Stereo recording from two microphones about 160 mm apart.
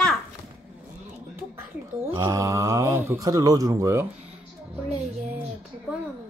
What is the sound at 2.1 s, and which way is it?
Speech, 20° right (ahead or behind).